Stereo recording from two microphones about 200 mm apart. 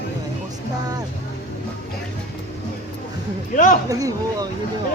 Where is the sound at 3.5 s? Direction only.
40° left (ahead or behind).